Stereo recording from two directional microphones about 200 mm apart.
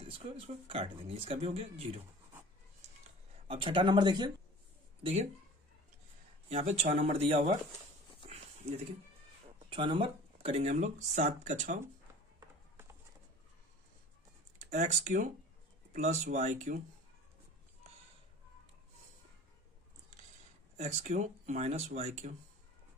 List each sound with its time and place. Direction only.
0.0 s speech: 30° right (ahead or behind)
3.4 s speech: 25° right (ahead or behind)
5.0 s speech: 30° right (ahead or behind)
6.5 s speech: 30° right (ahead or behind)
8.3 s a sound: 30° right (ahead or behind)
9.7 s speech: 25° right (ahead or behind)
14.6 s speech: 35° right (ahead or behind)
20.7 s speech: 35° right (ahead or behind)